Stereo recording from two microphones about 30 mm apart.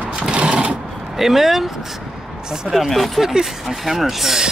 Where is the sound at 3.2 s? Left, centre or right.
Centre.